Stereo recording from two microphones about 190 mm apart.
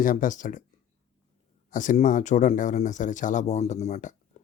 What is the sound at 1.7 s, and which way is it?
Speech, 45° left (ahead or behind).